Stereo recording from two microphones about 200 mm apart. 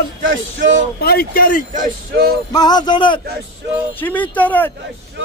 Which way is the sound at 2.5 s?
20° left (ahead or behind).